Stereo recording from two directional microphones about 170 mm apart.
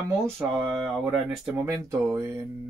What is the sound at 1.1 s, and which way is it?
Speech, 15° right (ahead or behind).